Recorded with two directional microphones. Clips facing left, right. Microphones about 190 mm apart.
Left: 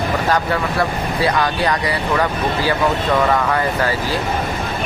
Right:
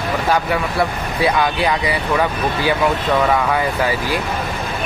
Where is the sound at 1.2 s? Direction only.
10° right (ahead or behind).